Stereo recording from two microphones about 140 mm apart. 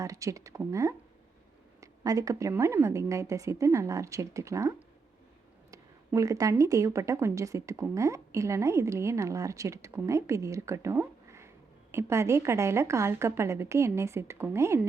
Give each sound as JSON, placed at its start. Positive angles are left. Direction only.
{"t": 0.0, "sound": "a woman's voice", "side_deg": -25}
{"t": 6.1, "sound": "a woman's voice", "side_deg": -25}